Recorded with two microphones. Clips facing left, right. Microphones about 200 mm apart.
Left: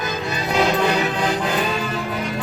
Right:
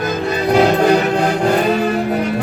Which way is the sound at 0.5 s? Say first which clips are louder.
Right 6 dB; 50° right (ahead or behind).